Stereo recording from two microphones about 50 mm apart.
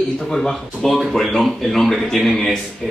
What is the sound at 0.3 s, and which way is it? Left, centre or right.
Speech, centre.